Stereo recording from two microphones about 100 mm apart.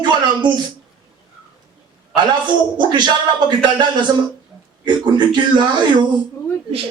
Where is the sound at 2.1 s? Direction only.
50° right (ahead or behind).